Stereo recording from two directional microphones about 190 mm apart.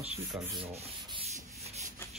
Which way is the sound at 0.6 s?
30° right (ahead or behind).